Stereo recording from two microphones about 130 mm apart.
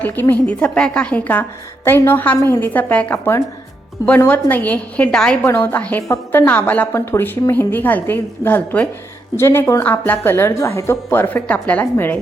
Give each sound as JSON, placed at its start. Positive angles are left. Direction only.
{"t": 0.0, "sound": "a woman's voice", "side_deg": 15}